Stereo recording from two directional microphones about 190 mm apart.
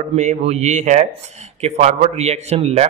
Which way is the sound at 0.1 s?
35° right (ahead or behind).